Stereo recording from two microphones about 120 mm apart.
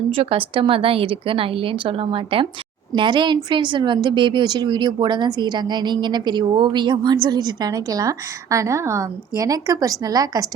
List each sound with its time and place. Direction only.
0.1 s a woman's voice: 50° right (ahead or behind); by 10.5 s 30° right (ahead or behind)